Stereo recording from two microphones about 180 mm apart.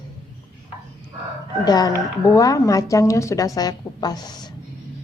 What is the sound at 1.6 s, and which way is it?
Speech, 20° left (ahead or behind).